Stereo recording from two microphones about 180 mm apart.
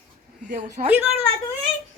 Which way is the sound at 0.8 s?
40° right (ahead or behind).